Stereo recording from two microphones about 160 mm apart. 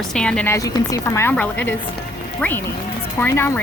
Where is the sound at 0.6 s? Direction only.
20° left (ahead or behind).